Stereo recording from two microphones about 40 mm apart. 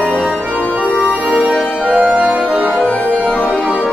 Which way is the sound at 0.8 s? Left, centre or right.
Left.